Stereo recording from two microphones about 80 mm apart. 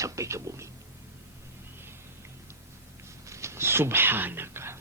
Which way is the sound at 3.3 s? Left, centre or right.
Right.